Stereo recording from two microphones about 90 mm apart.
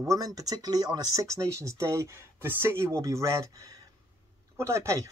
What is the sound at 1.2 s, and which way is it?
Speech, 35° right (ahead or behind).